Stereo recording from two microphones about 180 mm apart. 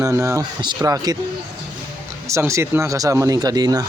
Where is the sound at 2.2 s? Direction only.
15° right (ahead or behind).